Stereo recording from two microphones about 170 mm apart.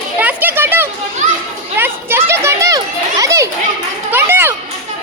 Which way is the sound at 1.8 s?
15° right (ahead or behind).